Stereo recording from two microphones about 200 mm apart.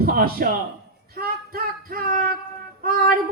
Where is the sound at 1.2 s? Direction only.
50° right (ahead or behind).